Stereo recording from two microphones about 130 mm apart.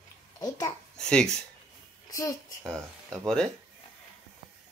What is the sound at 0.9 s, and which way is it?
Speech, 5° left (ahead or behind).